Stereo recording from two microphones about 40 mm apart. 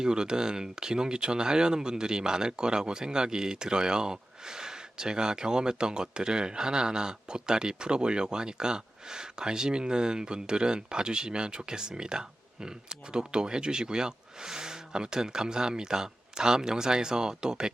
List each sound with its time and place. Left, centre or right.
0.0 s speech: centre